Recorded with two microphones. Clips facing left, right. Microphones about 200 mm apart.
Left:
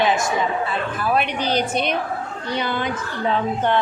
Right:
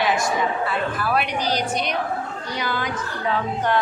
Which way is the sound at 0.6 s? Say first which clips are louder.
Left 1 dB; 20° left (ahead or behind).